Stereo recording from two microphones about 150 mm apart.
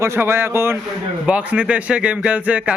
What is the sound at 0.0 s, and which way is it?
Speech, 15° right (ahead or behind).